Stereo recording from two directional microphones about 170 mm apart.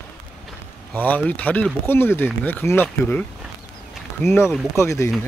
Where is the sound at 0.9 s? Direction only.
10° left (ahead or behind).